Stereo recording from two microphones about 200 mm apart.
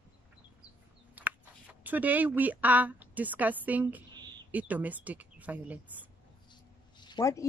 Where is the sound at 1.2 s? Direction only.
10° right (ahead or behind).